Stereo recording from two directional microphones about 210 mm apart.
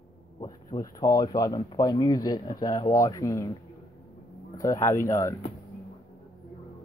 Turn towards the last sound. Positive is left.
turn(degrees=15)  # may be behind; listen again after turning